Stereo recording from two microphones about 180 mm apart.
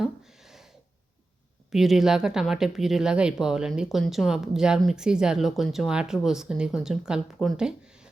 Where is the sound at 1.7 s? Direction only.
Centre (ahead or behind).